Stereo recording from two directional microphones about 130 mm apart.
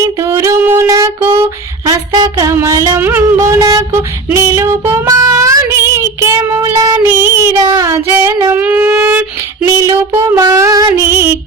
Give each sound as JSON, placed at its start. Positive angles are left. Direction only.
{"t": 0.2, "sound": "a sound", "side_deg": -20}
{"t": 1.8, "sound": "a sound", "side_deg": -30}
{"t": 2.5, "sound": "music", "side_deg": -20}
{"t": 3.0, "sound": "music", "side_deg": -15}
{"t": 4.3, "sound": "child singing", "side_deg": -20}
{"t": 7.1, "sound": "child singing", "side_deg": -20}
{"t": 7.9, "sound": "female singing", "side_deg": -15}
{"t": 8.5, "sound": "wind instrument", "side_deg": -10}
{"t": 9.6, "sound": "female singing", "side_deg": -25}
{"t": 10.2, "sound": "music", "side_deg": -25}